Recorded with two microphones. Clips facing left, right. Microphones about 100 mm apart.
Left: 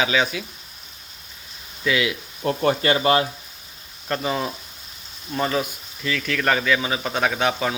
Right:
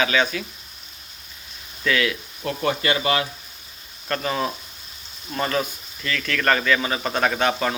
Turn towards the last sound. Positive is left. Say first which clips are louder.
# right 1 dB
turn(degrees=5)  # may be behind; listen again after turning